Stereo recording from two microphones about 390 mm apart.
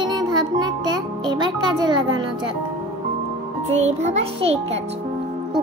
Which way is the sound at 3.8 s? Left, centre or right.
Centre.